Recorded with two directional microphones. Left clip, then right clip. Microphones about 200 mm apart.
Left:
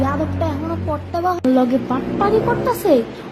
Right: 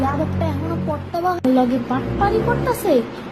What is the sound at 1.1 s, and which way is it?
Speech, 10° left (ahead or behind).